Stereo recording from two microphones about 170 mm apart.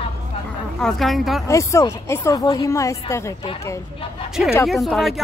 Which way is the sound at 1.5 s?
15° left (ahead or behind).